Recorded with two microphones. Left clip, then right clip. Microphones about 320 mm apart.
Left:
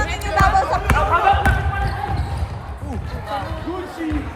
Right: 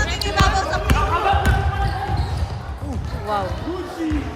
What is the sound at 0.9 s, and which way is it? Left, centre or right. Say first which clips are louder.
Basketball bounce: left 4 dB; centre.